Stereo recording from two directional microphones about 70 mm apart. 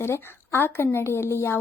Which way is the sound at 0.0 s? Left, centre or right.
Left.